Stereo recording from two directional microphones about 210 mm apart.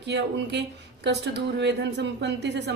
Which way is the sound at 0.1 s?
55° right (ahead or behind).